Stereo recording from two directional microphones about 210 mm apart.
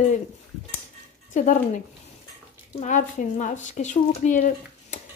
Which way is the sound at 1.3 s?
40° left (ahead or behind).